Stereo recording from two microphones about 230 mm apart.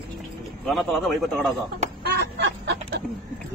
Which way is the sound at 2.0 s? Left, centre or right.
Right.